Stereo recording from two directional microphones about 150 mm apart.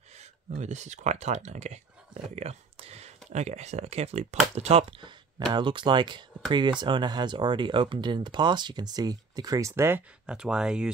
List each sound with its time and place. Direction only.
0.6 s speech: 50° right (ahead or behind)
5.5 s speech: 30° right (ahead or behind); by 10.0 s 15° right (ahead or behind)
10.2 s speech: 5° right (ahead or behind)